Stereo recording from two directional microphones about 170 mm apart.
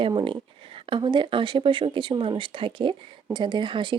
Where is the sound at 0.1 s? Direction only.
30° right (ahead or behind).